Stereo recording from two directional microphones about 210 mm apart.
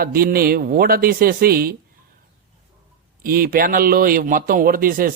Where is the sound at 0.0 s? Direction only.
45° right (ahead or behind).